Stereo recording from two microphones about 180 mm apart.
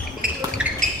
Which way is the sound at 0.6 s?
5° right (ahead or behind).